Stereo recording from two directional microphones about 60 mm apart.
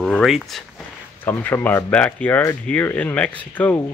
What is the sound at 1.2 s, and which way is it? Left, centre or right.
Speech, left.